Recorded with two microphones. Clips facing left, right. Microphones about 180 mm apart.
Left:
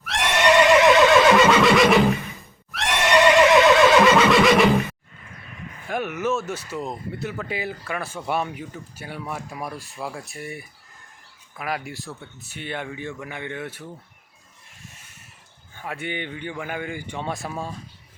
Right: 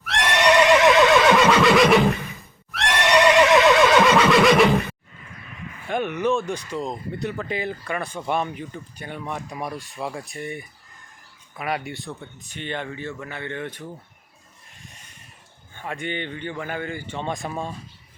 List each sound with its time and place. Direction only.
0.0 s neigh: centre (ahead or behind)
5.9 s speech: 5° left (ahead or behind)
14.8 s a sound: 5° left (ahead or behind)
15.7 s speech: 5° left (ahead or behind)